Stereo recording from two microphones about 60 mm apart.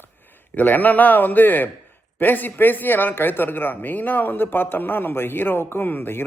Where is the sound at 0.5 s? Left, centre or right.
Left.